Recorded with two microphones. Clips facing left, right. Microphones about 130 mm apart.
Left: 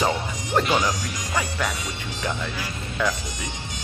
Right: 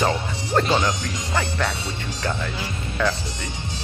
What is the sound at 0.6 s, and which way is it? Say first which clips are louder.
Speech: right 1 dB; 25° right (ahead or behind).